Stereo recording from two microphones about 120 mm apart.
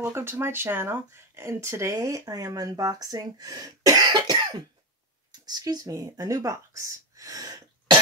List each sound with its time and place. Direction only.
0.0 s speech: 20° right (ahead or behind)